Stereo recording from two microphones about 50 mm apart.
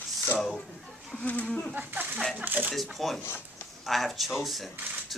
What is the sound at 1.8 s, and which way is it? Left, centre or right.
Speech, right.